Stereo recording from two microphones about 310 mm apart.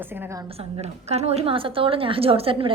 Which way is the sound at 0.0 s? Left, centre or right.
Centre.